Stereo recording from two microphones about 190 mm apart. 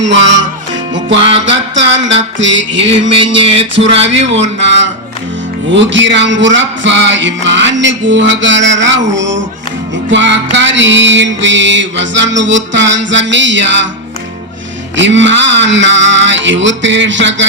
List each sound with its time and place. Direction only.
0.0 s music: 75° right (ahead or behind)
3.1 s music: 30° right (ahead or behind)
4.6 s music: 70° right (ahead or behind)
14.9 s music: 70° right (ahead or behind)